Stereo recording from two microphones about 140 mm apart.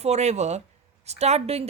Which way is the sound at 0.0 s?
50° right (ahead or behind).